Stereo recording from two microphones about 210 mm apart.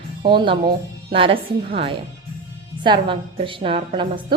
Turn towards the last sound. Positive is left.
turn(degrees=-25)  # may be behind; listen again after turning